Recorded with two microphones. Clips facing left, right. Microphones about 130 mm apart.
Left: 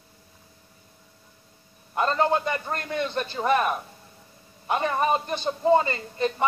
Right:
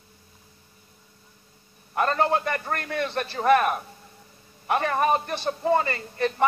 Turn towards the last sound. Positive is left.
turn(degrees=20)  # may be behind; listen again after turning